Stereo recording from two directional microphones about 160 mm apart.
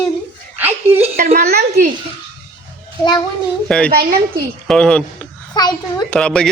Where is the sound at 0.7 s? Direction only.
40° right (ahead or behind).